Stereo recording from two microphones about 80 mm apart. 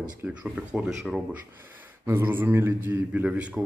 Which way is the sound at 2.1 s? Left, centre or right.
Right.